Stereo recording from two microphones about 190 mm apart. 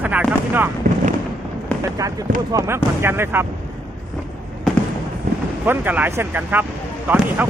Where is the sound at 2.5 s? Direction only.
15° right (ahead or behind).